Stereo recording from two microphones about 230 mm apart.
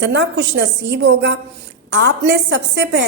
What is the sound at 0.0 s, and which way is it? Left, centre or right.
A woman's voice, right.